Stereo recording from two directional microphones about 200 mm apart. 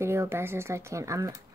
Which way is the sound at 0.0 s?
10° right (ahead or behind).